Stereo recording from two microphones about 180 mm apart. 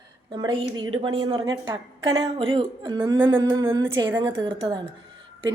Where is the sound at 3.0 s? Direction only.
15° right (ahead or behind).